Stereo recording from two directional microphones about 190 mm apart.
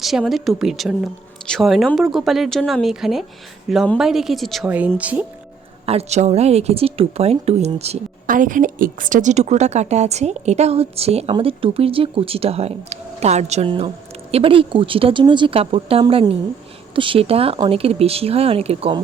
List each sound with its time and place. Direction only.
0.0 s speech: centre (ahead or behind)
5.8 s speech: 30° right (ahead or behind)